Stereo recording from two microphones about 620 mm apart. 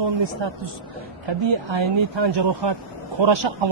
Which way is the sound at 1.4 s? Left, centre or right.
Right.